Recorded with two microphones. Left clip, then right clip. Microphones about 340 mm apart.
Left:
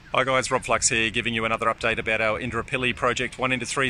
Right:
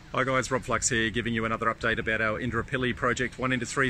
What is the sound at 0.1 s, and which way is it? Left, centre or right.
Speech, centre.